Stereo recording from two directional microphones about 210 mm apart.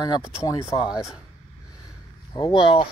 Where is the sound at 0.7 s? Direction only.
20° left (ahead or behind).